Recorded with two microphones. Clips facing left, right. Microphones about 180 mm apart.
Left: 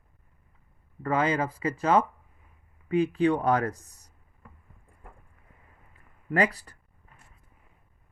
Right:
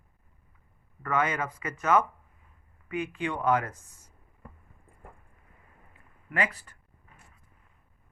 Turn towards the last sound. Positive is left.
turn(degrees=35)  # may be behind; listen again after turning